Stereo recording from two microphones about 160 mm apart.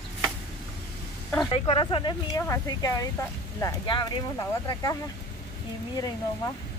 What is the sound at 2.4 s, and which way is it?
Speech, 20° left (ahead or behind).